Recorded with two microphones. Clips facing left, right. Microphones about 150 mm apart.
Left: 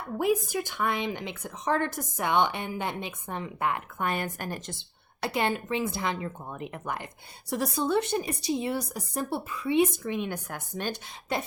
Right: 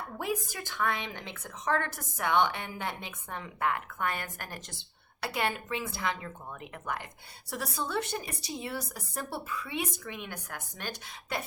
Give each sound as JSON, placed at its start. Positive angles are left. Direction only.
{"t": 0.2, "sound": "a woman's voice", "side_deg": 15}
{"t": 7.5, "sound": "a woman's voice", "side_deg": 20}